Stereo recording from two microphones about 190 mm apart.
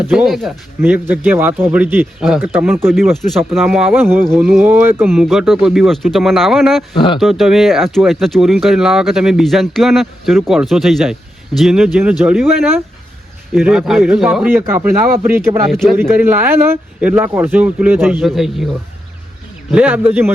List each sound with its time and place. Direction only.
0.1 s speech: centre (ahead or behind)
0.8 s speech: 10° right (ahead or behind)
2.9 s speech: centre (ahead or behind)
6.9 s speech: 25° left (ahead or behind)
7.2 s speech: centre (ahead or behind)
15.7 s speech: centre (ahead or behind)
16.0 s speech: 10° right (ahead or behind)
19.7 s speech: 10° right (ahead or behind)